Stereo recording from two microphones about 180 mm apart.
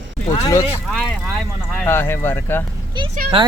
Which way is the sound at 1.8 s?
15° left (ahead or behind).